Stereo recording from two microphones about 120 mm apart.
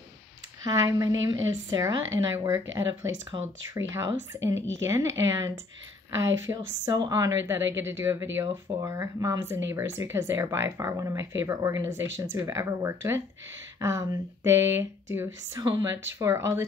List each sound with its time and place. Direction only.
0.7 s a woman's voice: 30° right (ahead or behind)